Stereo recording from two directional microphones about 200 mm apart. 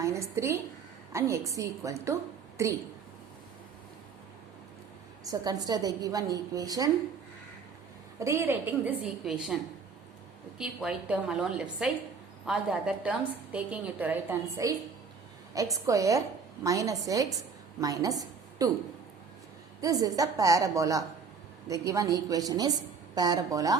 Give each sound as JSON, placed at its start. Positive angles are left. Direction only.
{"t": 0.0, "sound": "a woman's voice", "side_deg": -15}
{"t": 5.3, "sound": "a woman's voice", "side_deg": -20}
{"t": 8.2, "sound": "a woman's voice", "side_deg": -10}
{"t": 10.6, "sound": "a woman's voice", "side_deg": -5}
{"t": 19.8, "sound": "a woman's voice", "side_deg": -15}